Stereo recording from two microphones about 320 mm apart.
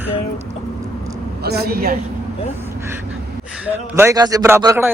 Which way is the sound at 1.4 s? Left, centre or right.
Right.